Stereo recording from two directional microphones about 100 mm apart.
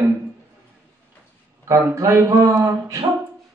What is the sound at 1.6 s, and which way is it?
Speech, 30° right (ahead or behind).